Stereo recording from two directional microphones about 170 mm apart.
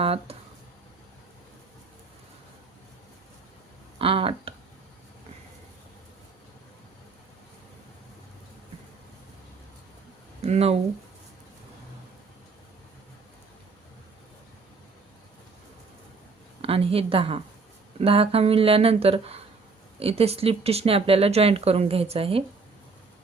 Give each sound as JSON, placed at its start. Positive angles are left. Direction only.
{"t": 0.0, "sound": "speech", "side_deg": -35}
{"t": 3.9, "sound": "speech", "side_deg": -35}
{"t": 10.4, "sound": "speech", "side_deg": -40}
{"t": 16.6, "sound": "speech", "side_deg": -35}